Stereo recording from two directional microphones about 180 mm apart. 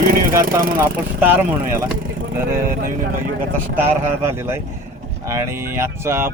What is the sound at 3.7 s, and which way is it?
Speech, 15° right (ahead or behind).